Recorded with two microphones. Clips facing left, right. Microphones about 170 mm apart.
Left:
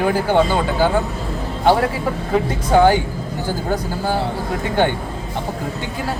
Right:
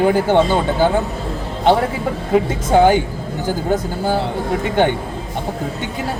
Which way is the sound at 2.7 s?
20° right (ahead or behind).